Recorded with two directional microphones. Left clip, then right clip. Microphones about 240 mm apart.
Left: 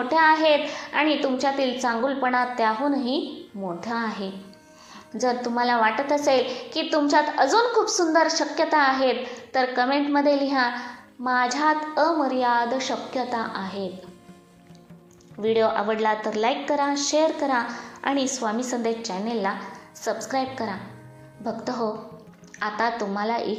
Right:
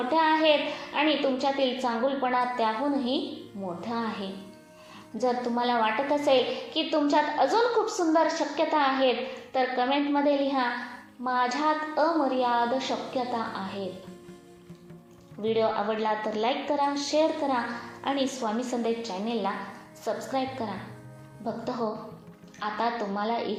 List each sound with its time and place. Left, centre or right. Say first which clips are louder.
0.1 s a woman's voice: left 4 dB; left
15.4 s a woman's voice: left 4 dB; left